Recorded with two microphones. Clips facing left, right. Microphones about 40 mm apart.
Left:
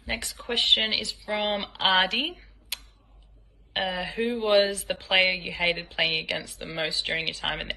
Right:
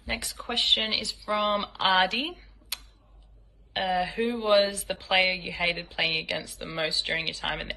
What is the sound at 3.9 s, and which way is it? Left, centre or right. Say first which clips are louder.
Speech: right 4 dB; left.